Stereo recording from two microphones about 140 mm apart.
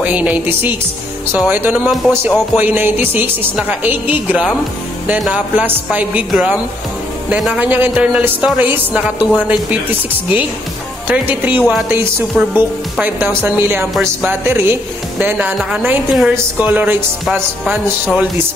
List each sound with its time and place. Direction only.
0.0 s speech: 10° right (ahead or behind)
13.4 s speech: 15° right (ahead or behind)